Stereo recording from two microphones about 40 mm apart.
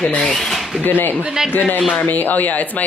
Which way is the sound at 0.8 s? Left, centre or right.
Left.